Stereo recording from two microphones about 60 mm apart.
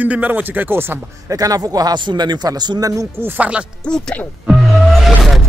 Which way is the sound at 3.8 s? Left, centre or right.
Centre.